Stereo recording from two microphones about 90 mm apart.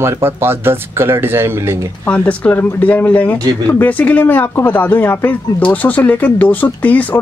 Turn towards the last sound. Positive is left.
turn(degrees=20)  # may be behind; listen again after turning